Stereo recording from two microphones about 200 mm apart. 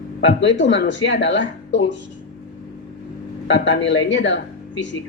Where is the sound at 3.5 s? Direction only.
65° left (ahead or behind).